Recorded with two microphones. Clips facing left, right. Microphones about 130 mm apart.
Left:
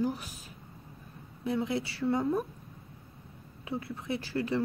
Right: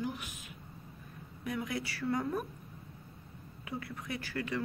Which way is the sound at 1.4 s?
30° left (ahead or behind).